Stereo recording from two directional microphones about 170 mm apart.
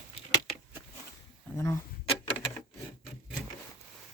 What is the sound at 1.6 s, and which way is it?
Speech, 15° left (ahead or behind).